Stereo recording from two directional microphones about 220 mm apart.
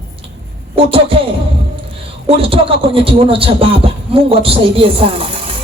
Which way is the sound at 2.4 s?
25° right (ahead or behind).